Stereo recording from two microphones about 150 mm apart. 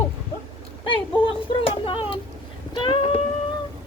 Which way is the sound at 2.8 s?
35° left (ahead or behind).